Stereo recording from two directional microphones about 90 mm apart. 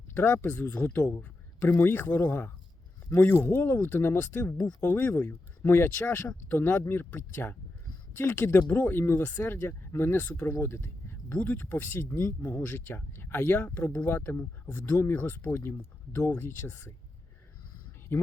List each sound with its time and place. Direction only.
0.1 s speech: 20° left (ahead or behind)
18.1 s speech: 25° left (ahead or behind)